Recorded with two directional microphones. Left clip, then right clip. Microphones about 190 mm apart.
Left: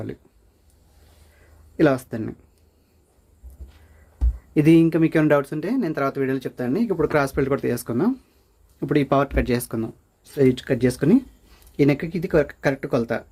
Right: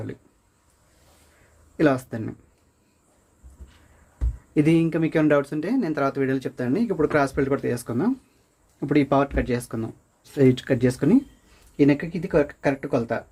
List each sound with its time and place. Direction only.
1.7 s speech: 25° left (ahead or behind)
4.5 s speech: 25° left (ahead or behind)
8.8 s speech: 10° left (ahead or behind); by 9.9 s 30° left (ahead or behind)
10.3 s speech: 5° right (ahead or behind)
10.8 s speech: 15° left (ahead or behind)